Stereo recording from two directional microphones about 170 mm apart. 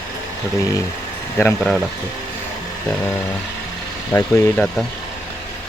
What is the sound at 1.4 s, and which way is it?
Speech, 10° left (ahead or behind).